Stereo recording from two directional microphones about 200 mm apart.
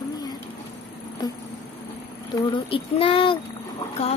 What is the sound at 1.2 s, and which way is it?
Insect, 20° left (ahead or behind).